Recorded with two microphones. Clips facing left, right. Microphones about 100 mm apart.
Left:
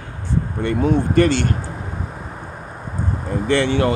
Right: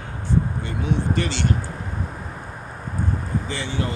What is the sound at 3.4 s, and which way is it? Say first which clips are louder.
Speech: left 10 dB; 70° left (ahead or behind).